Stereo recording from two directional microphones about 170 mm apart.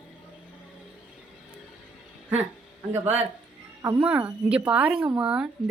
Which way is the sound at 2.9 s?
10° right (ahead or behind).